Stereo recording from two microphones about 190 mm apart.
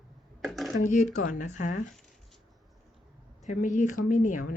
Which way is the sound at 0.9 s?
45° left (ahead or behind).